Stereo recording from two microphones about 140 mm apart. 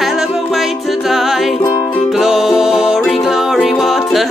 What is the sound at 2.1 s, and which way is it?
Music, centre (ahead or behind).